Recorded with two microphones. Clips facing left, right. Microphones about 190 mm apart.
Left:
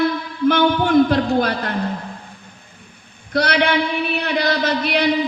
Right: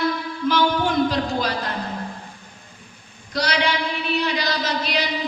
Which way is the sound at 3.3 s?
55° left (ahead or behind).